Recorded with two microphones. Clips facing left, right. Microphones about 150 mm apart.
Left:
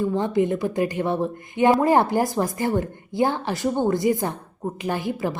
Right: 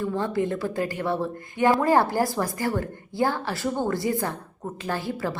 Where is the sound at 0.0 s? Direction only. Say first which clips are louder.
Left 4 dB; 20° left (ahead or behind).